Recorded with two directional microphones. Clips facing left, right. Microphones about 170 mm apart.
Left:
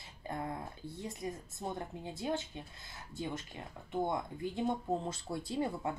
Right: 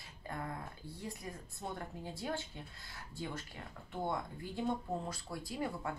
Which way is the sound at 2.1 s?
20° left (ahead or behind).